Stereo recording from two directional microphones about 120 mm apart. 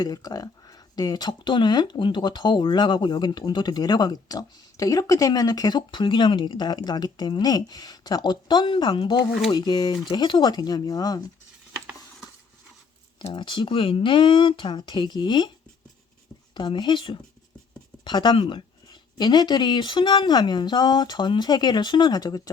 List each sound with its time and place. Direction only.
0.0 s speech: 35° left (ahead or behind)
13.2 s speech: 45° left (ahead or behind)
16.6 s speech: 40° left (ahead or behind)